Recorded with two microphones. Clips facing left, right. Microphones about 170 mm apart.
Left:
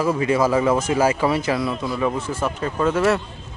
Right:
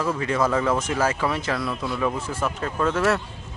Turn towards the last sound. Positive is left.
turn(degrees=5)  # may be behind; listen again after turning